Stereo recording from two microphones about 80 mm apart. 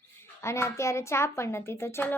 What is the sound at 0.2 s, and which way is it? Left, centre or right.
A child's voice, left.